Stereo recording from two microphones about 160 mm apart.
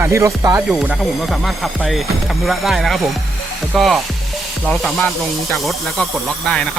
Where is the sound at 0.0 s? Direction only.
15° right (ahead or behind).